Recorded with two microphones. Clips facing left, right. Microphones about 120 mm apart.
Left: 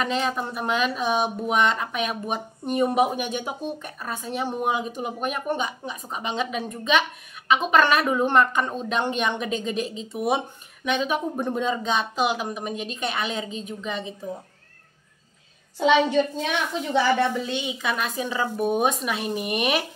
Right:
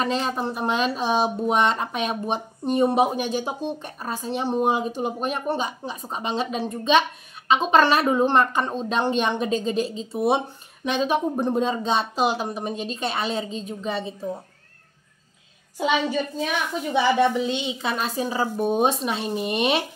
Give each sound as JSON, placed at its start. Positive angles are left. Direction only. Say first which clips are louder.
{"t": 0.0, "sound": "speech", "louder": "right 1 dB", "side_deg": -35}
{"t": 16.7, "sound": "speech", "louder": "right 1 dB", "side_deg": -15}